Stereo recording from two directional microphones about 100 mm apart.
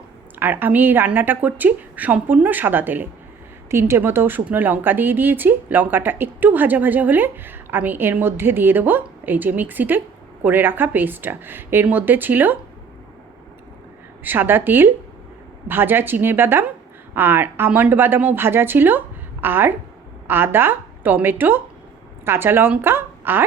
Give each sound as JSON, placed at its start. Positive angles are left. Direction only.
{"t": 0.3, "sound": "a woman's voice", "side_deg": -20}
{"t": 14.3, "sound": "a woman's voice", "side_deg": -20}